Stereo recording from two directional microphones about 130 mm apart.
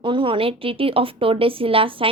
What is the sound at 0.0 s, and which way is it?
A woman's voice, 40° right (ahead or behind).